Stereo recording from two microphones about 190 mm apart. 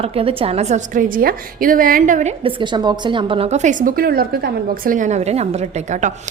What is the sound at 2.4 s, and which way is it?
A woman's voice, 25° right (ahead or behind).